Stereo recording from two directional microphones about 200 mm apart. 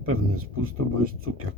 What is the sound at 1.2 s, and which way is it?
Speech, 90° right.